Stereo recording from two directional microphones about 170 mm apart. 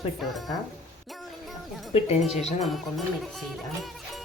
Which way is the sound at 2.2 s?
Centre (ahead or behind).